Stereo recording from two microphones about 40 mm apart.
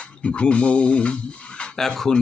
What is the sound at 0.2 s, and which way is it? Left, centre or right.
Speech, left.